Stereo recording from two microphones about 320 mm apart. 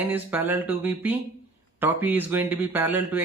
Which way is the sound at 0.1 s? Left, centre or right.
Centre.